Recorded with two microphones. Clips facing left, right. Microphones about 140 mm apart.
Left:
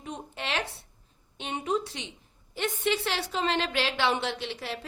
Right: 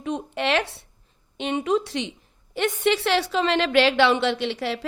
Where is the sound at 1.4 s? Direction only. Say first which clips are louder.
Right 7 dB; 90° right.